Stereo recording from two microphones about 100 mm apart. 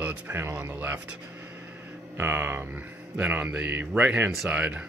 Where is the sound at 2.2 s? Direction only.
20° right (ahead or behind).